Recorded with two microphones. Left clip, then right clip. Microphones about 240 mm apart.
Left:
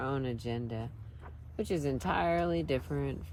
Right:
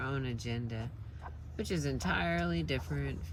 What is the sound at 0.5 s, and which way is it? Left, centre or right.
Speech, left.